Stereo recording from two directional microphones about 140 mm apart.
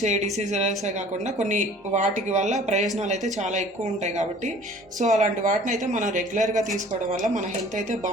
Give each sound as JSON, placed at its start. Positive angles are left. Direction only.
{"t": 0.0, "sound": "speech", "side_deg": -55}